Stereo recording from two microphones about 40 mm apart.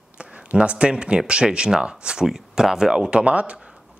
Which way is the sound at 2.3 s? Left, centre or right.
Centre.